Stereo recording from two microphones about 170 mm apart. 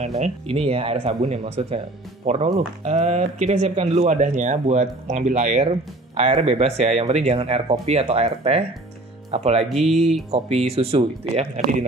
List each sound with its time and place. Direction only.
0.0 s speech: 40° right (ahead or behind)
9.7 s speech: centre (ahead or behind)
10.3 s speech: 35° right (ahead or behind)